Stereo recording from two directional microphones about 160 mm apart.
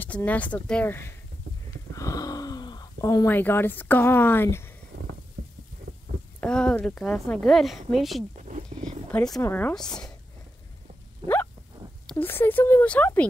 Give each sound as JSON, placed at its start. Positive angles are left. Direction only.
{"t": 0.0, "sound": "speech", "side_deg": 10}
{"t": 2.0, "sound": "a sound", "side_deg": 20}
{"t": 3.0, "sound": "speech", "side_deg": 20}
{"t": 6.4, "sound": "a woman's voice", "side_deg": 5}
{"t": 8.7, "sound": "roaring cats", "side_deg": -40}
{"t": 9.1, "sound": "a woman's voice", "side_deg": 5}
{"t": 11.2, "sound": "a sound", "side_deg": -35}
{"t": 12.1, "sound": "speech", "side_deg": 10}